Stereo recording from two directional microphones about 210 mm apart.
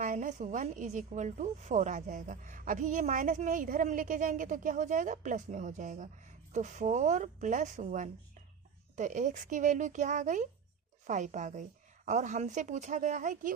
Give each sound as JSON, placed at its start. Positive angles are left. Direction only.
{"t": 0.0, "sound": "a woman's voice", "side_deg": -40}